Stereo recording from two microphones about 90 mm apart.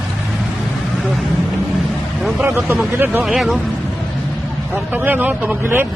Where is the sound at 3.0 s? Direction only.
20° right (ahead or behind).